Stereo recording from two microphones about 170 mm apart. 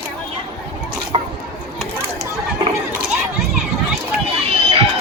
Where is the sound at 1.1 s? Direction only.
30° right (ahead or behind).